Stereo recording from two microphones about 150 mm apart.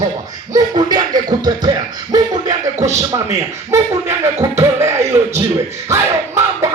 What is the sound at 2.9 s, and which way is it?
A man's voice, 20° right (ahead or behind).